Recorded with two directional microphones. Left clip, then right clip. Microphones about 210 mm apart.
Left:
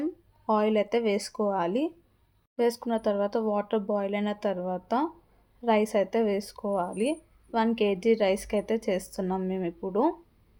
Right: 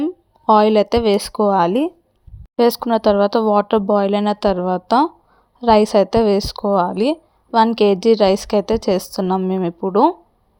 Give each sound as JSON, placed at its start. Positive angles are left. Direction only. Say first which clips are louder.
{"t": 0.0, "sound": "a woman's voice", "louder": "right 12 dB", "side_deg": -30}